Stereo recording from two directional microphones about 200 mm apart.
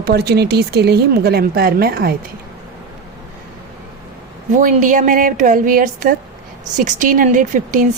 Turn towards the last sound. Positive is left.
turn(degrees=-40)  # may be behind; listen again after turning